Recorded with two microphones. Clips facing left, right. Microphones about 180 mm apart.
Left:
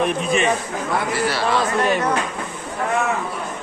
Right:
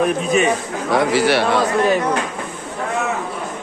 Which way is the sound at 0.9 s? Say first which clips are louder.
Right 7 dB; 90° right.